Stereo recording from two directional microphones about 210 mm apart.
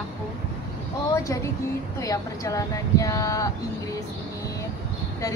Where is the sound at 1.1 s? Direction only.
15° left (ahead or behind).